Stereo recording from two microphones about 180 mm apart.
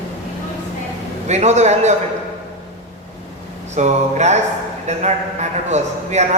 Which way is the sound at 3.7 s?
40° right (ahead or behind).